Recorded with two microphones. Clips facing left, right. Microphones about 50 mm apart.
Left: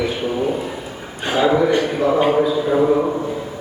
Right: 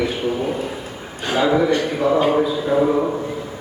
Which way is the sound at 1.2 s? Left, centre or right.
Centre.